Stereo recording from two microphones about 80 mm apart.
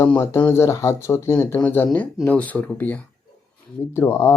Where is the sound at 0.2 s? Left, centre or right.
Left.